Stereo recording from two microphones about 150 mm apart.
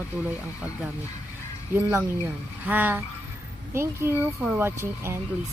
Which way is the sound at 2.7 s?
10° right (ahead or behind).